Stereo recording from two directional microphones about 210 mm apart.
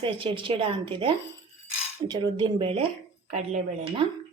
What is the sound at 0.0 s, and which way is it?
A woman's voice, 25° right (ahead or behind).